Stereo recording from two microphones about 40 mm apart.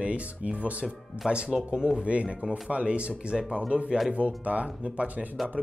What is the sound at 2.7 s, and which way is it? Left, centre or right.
Speech, right.